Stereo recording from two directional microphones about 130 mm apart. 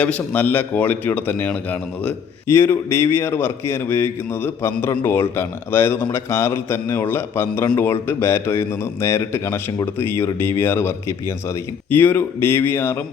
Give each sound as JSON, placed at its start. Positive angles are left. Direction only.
{"t": 0.0, "sound": "a man's voice", "side_deg": 10}